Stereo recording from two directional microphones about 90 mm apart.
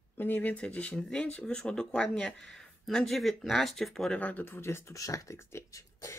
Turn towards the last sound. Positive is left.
turn(degrees=35)  # may be behind; listen again after turning